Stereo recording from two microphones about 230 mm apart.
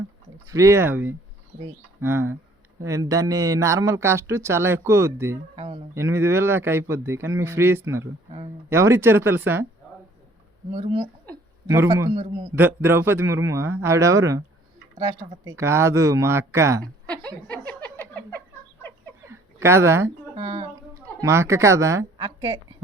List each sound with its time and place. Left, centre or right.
0.4 s speech: centre
5.5 s a sound: right
5.9 s speech: centre
10.7 s speech: right
11.7 s speech: centre
16.8 s a woman's voice: centre
17.7 s a sound: centre
18.1 s fowl: centre
19.3 s a sound: centre
20.3 s speech: centre